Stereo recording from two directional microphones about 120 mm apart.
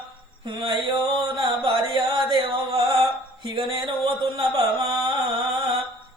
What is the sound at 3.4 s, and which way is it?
Speech, 45° right (ahead or behind).